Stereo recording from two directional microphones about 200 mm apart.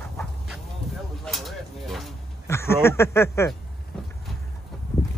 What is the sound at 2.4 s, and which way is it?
Speech, 10° left (ahead or behind).